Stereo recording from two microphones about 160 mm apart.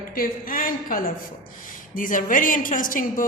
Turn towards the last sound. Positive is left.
turn(degrees=60)  # may be behind; listen again after turning